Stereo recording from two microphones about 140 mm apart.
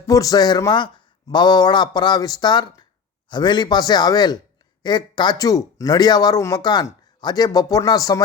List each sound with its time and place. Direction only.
0.1 s speech: 25° left (ahead or behind)